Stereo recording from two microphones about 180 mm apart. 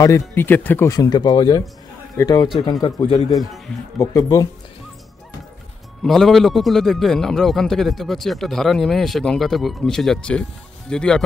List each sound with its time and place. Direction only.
0.0 s speech: 15° left (ahead or behind)
3.3 s a man's voice: centre (ahead or behind)
4.0 s speech: 20° left (ahead or behind)
6.0 s a man's voice: centre (ahead or behind)